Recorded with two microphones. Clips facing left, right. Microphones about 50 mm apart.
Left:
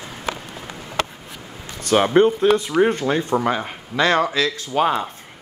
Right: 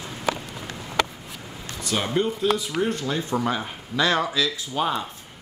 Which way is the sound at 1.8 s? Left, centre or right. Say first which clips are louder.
Left 9 dB; left.